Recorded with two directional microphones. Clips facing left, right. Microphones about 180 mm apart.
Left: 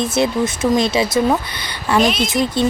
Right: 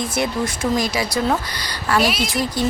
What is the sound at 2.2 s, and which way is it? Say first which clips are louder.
Speech: left 4 dB; 20° left (ahead or behind).